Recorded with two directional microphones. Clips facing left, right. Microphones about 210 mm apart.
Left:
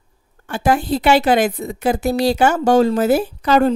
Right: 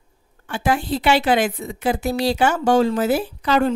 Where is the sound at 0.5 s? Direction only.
40° left (ahead or behind).